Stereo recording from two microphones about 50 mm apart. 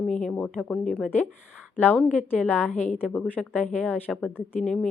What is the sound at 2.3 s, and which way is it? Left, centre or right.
A woman's voice, left.